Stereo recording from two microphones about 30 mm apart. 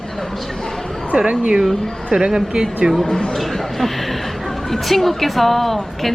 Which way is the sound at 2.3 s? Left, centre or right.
Centre.